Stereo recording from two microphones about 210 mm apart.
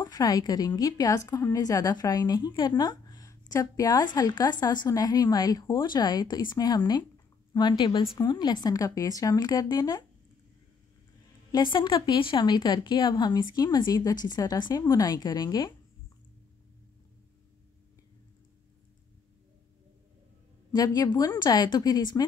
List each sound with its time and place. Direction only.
0.0 s a woman's voice: 15° left (ahead or behind)
11.5 s a woman's voice: 20° left (ahead or behind)
20.7 s a woman's voice: 15° left (ahead or behind)